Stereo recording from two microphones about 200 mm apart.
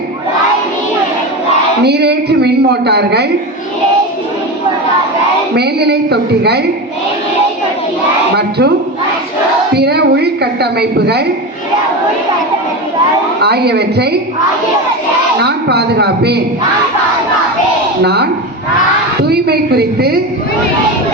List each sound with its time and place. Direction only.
1.8 s a woman's voice: 55° right (ahead or behind)
5.5 s a woman's voice: 55° right (ahead or behind)
8.4 s speech: 55° right (ahead or behind)
9.7 s a sound: 55° right (ahead or behind)
13.4 s a woman's voice: 55° right (ahead or behind)
15.4 s a woman's voice: 55° right (ahead or behind)
18.0 s a woman's voice: 55° right (ahead or behind)
19.2 s a sound: 55° right (ahead or behind)